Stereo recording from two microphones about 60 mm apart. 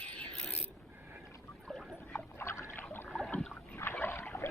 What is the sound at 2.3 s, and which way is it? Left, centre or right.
Rowboat, left.